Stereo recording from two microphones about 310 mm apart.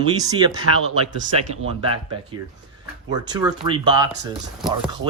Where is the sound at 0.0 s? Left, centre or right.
Centre.